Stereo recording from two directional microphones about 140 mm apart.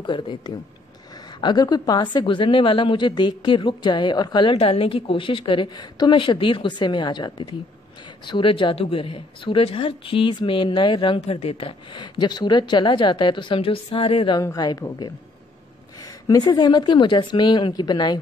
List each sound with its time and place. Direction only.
0.0 s a woman's voice: 35° left (ahead or behind)
11.1 s a woman's voice: 45° left (ahead or behind)
14.4 s a woman's voice: 25° left (ahead or behind)